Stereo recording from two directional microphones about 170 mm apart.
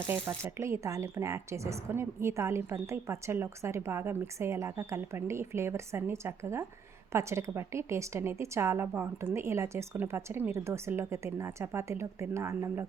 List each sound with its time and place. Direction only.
0.1 s speech: 15° right (ahead or behind)